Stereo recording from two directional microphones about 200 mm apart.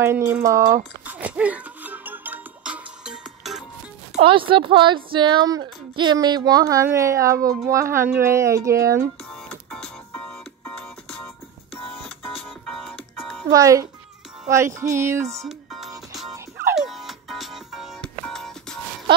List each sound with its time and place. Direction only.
0.0 s speech: 10° right (ahead or behind)
1.0 s music: 5° right (ahead or behind)
4.1 s speech: 25° right (ahead or behind)
9.3 s music: centre (ahead or behind)
12.4 s music: centre (ahead or behind)
13.5 s speech: 15° right (ahead or behind)
15.4 s music: centre (ahead or behind)